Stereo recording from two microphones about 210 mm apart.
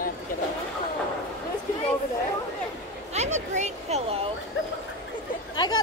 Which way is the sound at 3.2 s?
35° right (ahead or behind).